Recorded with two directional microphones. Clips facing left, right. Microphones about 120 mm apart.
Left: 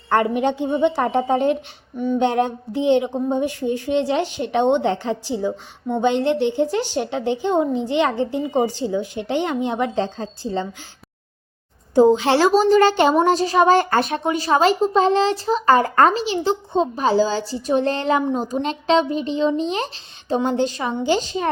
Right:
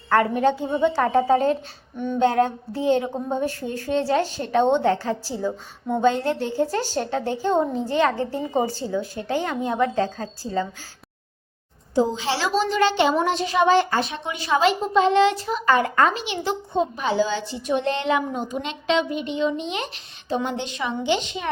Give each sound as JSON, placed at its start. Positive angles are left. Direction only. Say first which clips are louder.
{"t": 0.1, "sound": "a woman's voice", "louder": "left 1 dB", "side_deg": 20}
{"t": 11.9, "sound": "speech", "louder": "left 8 dB", "side_deg": 55}